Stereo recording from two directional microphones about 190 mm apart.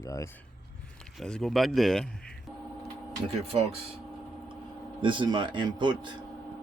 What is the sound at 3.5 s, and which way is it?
Speech, 30° right (ahead or behind).